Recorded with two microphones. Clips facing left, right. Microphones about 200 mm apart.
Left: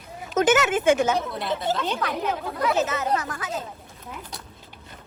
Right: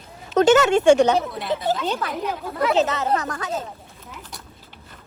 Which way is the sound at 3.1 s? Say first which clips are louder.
Right 3 dB; 40° right (ahead or behind).